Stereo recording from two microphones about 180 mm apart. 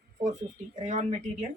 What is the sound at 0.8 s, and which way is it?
Speech, 40° right (ahead or behind).